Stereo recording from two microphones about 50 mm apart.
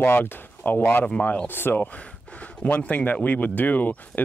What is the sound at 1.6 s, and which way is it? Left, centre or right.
Speech, left.